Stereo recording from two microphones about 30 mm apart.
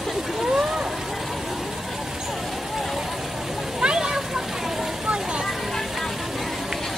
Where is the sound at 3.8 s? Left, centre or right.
Right.